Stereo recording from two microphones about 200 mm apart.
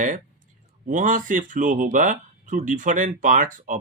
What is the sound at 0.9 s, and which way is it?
Speech, 40° right (ahead or behind).